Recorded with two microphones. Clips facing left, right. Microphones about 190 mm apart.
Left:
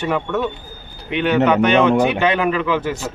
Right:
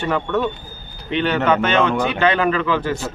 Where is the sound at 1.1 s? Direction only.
15° left (ahead or behind).